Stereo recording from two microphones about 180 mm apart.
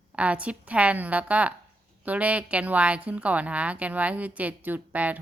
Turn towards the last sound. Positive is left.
turn(degrees=-10)  # may be behind; listen again after turning